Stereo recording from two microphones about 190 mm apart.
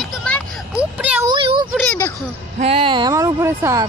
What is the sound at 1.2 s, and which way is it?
Speech, 25° right (ahead or behind).